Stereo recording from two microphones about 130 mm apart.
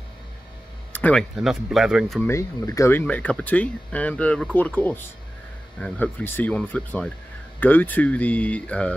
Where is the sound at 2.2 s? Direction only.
20° left (ahead or behind).